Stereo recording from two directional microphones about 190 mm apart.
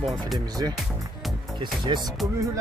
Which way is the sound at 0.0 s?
Centre (ahead or behind).